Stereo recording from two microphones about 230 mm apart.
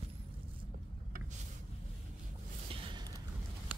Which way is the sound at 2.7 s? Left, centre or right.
Right.